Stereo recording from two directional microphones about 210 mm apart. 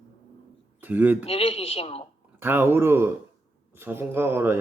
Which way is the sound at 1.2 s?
25° left (ahead or behind).